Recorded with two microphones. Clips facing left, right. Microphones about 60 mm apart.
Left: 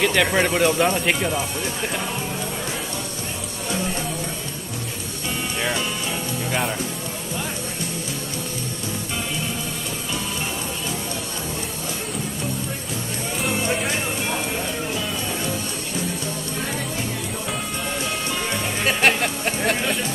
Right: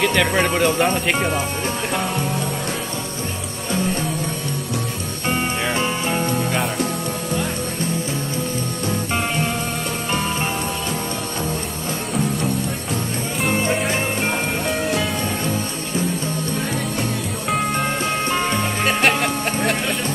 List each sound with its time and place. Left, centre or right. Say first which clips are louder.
0.0 s speech: right 1 dB; centre
13.7 s music: right 3 dB; centre
18.3 s music: right 6 dB; right
18.9 s music: right 1 dB; centre